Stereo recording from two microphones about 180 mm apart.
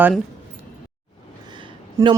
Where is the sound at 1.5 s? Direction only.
25° right (ahead or behind).